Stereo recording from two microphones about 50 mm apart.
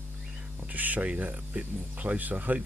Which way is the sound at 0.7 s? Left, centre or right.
Right.